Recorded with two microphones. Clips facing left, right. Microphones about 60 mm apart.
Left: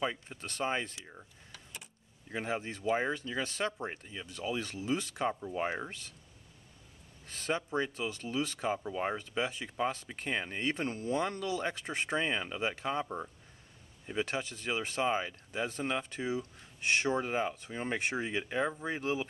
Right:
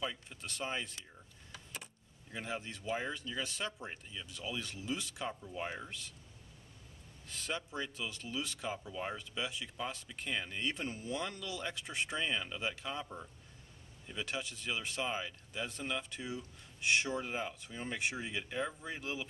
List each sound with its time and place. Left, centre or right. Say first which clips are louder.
0.0 s speech: left 5 dB; left
1.5 s vehicle: right 2 dB; centre
2.3 s speech: left 6 dB; left
7.2 s speech: left 6 dB; left